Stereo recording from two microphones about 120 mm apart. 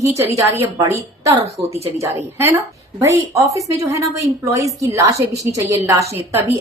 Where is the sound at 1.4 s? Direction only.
60° right (ahead or behind).